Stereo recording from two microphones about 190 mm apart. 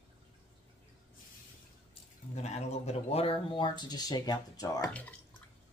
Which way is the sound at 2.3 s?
35° left (ahead or behind).